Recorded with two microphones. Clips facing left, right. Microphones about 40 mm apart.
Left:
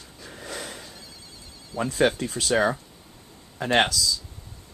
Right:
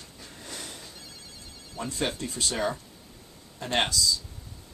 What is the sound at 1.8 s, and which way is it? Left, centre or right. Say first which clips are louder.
Speech: left 8 dB; left.